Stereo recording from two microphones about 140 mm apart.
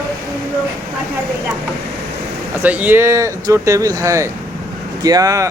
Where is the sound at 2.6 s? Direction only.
10° right (ahead or behind).